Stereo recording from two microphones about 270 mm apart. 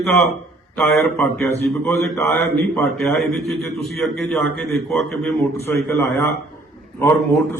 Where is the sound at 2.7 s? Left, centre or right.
Centre.